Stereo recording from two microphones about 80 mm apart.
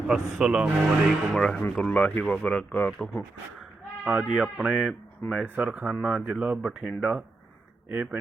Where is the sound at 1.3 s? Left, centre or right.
Centre.